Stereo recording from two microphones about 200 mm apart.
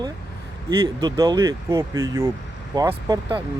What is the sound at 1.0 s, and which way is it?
Speech, 20° right (ahead or behind).